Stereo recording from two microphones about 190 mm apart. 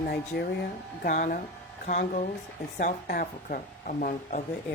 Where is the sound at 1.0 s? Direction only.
45° left (ahead or behind).